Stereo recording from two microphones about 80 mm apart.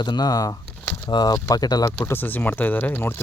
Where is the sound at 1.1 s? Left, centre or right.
Left.